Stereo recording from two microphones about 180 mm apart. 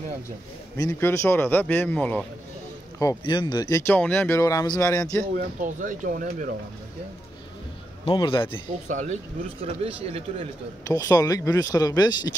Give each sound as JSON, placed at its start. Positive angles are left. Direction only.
{"t": 0.7, "sound": "speech", "side_deg": 15}
{"t": 3.0, "sound": "speech", "side_deg": 20}
{"t": 5.3, "sound": "speech", "side_deg": -45}
{"t": 8.0, "sound": "speech", "side_deg": 25}
{"t": 8.8, "sound": "speech", "side_deg": -45}
{"t": 9.6, "sound": "a man's voice", "side_deg": -35}
{"t": 10.9, "sound": "speech", "side_deg": 20}